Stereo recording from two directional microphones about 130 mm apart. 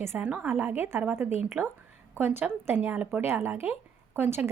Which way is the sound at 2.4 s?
15° right (ahead or behind).